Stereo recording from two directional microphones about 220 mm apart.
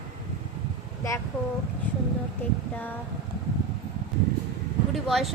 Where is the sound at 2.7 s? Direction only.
10° left (ahead or behind).